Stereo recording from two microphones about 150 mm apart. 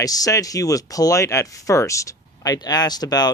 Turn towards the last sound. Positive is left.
turn(degrees=25)  # may be behind; listen again after turning